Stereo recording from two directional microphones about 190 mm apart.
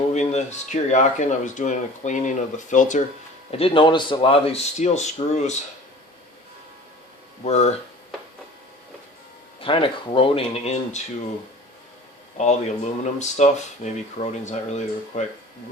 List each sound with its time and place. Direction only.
0.1 s speech: 35° left (ahead or behind)
3.6 s speech: 25° left (ahead or behind)
7.4 s speech: 35° left (ahead or behind)
9.6 s speech: 30° left (ahead or behind)
12.4 s speech: 35° left (ahead or behind)